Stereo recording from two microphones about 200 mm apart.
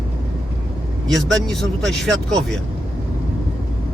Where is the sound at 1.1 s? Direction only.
Centre (ahead or behind).